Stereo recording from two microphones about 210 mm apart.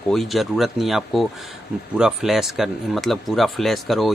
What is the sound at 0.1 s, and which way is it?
Speech, centre (ahead or behind).